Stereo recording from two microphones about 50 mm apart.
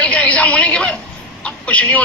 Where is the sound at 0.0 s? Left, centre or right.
Left.